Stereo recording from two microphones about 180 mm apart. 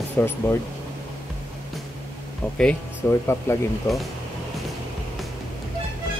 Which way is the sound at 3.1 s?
15° left (ahead or behind).